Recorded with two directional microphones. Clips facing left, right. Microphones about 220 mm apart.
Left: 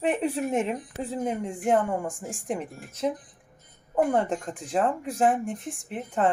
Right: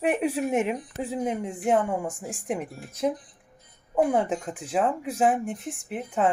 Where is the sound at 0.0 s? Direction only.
10° right (ahead or behind).